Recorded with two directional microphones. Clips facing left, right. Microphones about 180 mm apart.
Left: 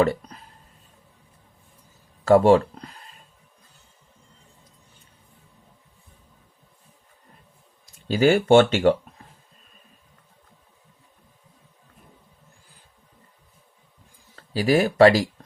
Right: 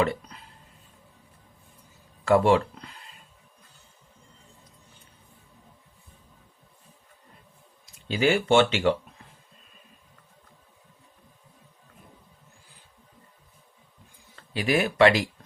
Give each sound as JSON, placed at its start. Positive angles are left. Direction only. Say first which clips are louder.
{"t": 0.0, "sound": "speech", "louder": "left 5 dB", "side_deg": 40}
{"t": 2.2, "sound": "speech", "louder": "left 5 dB", "side_deg": 40}
{"t": 8.0, "sound": "speech", "louder": "left 5 dB", "side_deg": 40}
{"t": 14.5, "sound": "speech", "louder": "left 5 dB", "side_deg": 35}